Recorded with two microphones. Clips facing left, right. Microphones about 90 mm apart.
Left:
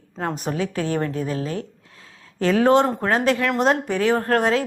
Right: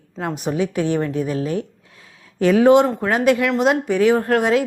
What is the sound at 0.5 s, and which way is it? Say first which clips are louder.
A woman's voice: right 6 dB; 20° right (ahead or behind).